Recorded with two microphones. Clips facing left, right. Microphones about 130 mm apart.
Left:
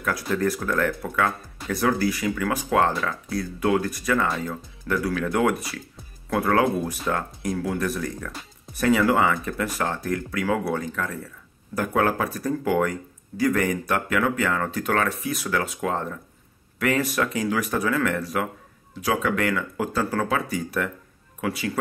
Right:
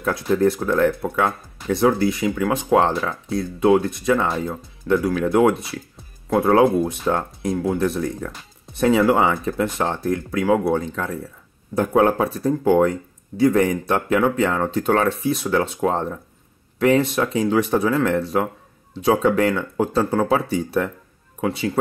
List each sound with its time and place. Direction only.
0.0 s speech: 25° right (ahead or behind)